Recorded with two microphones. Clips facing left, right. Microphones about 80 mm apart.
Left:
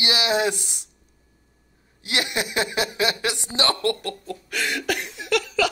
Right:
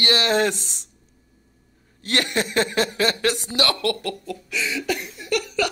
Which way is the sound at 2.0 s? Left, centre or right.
Centre.